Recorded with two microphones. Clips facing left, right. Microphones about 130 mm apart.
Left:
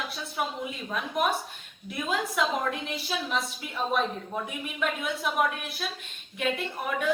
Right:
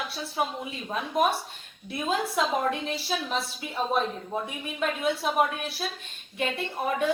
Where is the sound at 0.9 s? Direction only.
30° right (ahead or behind).